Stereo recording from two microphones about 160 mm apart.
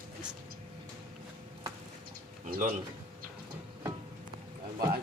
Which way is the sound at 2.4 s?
60° right (ahead or behind).